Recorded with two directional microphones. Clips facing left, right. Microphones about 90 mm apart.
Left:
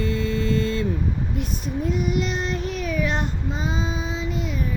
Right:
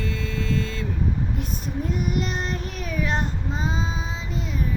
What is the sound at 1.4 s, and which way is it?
Child singing, 45° right (ahead or behind).